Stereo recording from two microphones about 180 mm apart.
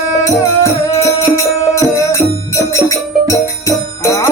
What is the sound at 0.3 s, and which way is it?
Music, 15° left (ahead or behind).